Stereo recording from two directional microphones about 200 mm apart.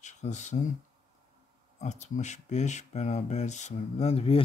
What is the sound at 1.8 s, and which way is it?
Speech, 35° left (ahead or behind).